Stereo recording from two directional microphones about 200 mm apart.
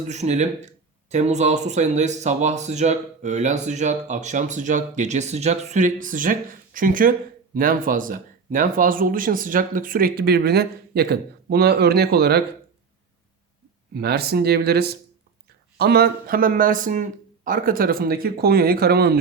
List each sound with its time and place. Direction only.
0.1 s speech: 35° right (ahead or behind); by 12.4 s 55° right (ahead or behind)
13.9 s speech: 50° right (ahead or behind)